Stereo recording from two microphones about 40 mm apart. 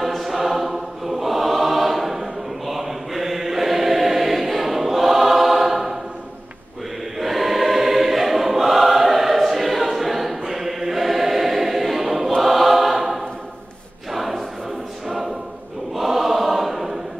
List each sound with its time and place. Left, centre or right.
0.0 s choir: centre
7.2 s choir: centre